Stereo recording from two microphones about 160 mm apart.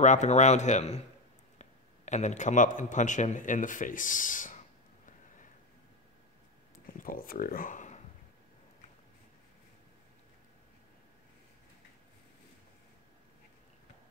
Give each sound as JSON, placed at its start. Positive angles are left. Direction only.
{"t": 0.0, "sound": "a man's voice", "side_deg": 50}
{"t": 7.0, "sound": "speech", "side_deg": 65}